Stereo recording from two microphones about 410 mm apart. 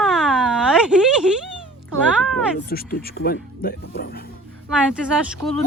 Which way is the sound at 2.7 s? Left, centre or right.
Left.